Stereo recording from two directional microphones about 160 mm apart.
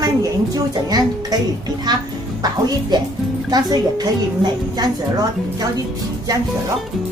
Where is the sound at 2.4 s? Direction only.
25° right (ahead or behind).